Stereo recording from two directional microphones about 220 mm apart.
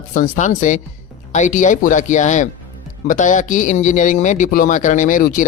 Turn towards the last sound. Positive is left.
turn(degrees=35)  # may be behind; listen again after turning